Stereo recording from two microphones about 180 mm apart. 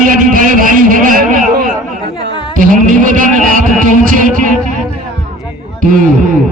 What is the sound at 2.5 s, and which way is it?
Music, 50° right (ahead or behind).